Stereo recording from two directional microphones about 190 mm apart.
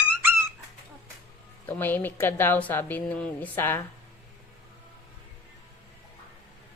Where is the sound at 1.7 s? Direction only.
10° left (ahead or behind).